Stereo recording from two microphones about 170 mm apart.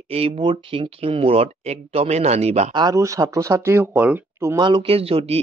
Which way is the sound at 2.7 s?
20° right (ahead or behind).